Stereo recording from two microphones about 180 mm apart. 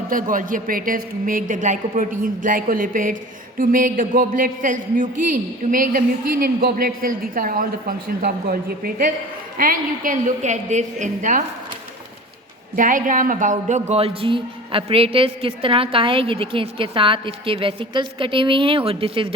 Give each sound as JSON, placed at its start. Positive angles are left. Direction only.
{"t": 0.1, "sound": "a woman's voice", "side_deg": -50}
{"t": 12.7, "sound": "a man's voice", "side_deg": -50}